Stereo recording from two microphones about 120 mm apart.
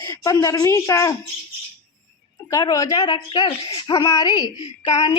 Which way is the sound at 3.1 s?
40° left (ahead or behind).